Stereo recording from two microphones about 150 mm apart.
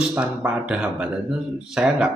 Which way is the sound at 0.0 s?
10° right (ahead or behind).